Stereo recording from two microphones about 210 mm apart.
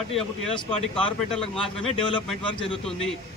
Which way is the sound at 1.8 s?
25° left (ahead or behind).